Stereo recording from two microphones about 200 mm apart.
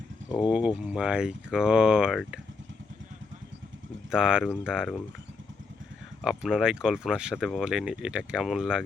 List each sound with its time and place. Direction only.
0.3 s speech: 5° right (ahead or behind)
4.1 s speech: 5° right (ahead or behind)
6.2 s speech: 5° right (ahead or behind)